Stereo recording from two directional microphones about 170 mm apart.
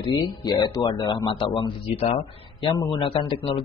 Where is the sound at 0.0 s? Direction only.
25° left (ahead or behind).